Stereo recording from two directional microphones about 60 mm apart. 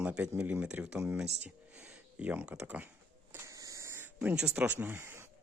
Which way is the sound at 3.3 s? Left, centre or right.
Right.